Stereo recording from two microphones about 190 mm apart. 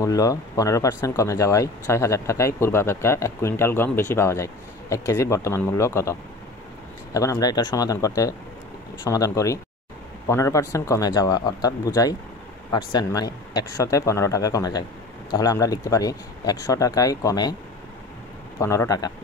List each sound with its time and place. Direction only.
0.0 s speech: 20° left (ahead or behind)
7.2 s speech: 15° left (ahead or behind)
18.6 s speech: 15° left (ahead or behind)